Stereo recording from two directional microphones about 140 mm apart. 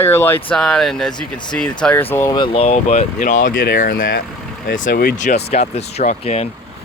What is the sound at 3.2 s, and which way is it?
Speech, 70° left (ahead or behind).